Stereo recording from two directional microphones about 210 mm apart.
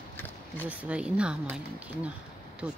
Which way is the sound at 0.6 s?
5° right (ahead or behind).